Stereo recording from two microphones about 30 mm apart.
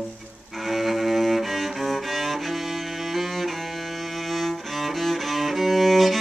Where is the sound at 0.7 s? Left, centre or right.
Centre.